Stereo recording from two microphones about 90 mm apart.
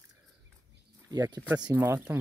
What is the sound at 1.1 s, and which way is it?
Speech, 40° right (ahead or behind).